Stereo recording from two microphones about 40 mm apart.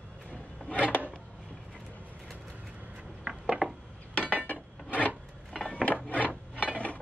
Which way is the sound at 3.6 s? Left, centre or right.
Right.